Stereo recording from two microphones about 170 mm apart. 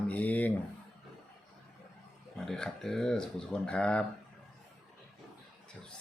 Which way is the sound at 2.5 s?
5° left (ahead or behind).